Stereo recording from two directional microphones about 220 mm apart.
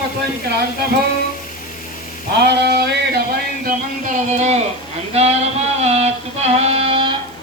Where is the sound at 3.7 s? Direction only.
35° right (ahead or behind).